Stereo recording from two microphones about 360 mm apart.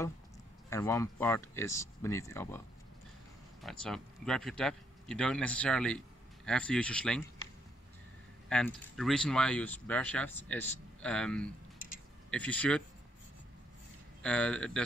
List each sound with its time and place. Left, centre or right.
0.7 s speech: centre
3.6 s speech: centre
8.5 s speech: centre
14.2 s speech: centre